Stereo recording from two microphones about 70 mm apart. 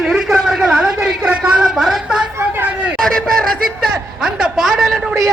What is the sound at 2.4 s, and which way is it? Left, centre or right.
Speech, right.